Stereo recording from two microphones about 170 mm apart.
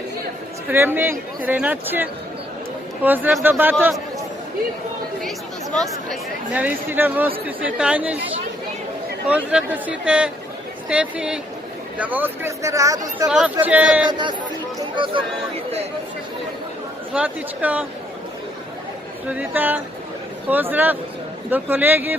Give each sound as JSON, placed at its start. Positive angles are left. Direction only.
{"t": 0.7, "sound": "speech", "side_deg": -10}
{"t": 6.5, "sound": "speech", "side_deg": -10}
{"t": 9.2, "sound": "speech", "side_deg": -5}
{"t": 13.2, "sound": "speech", "side_deg": -5}
{"t": 14.1, "sound": "speech", "side_deg": -25}
{"t": 17.2, "sound": "speech", "side_deg": -10}
{"t": 19.3, "sound": "speech", "side_deg": -10}